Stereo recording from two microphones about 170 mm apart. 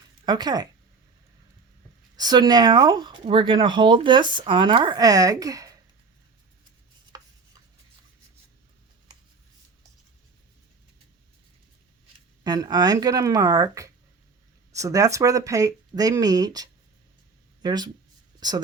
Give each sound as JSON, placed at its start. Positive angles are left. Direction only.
{"t": 0.3, "sound": "speech", "side_deg": -25}
{"t": 2.1, "sound": "speech", "side_deg": -25}
{"t": 7.1, "sound": "chopping", "side_deg": -20}
{"t": 12.4, "sound": "speech", "side_deg": -25}